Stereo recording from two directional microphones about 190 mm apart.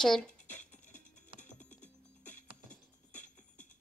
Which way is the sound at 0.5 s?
40° left (ahead or behind).